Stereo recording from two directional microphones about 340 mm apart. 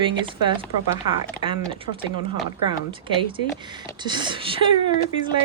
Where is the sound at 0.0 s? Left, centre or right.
Centre.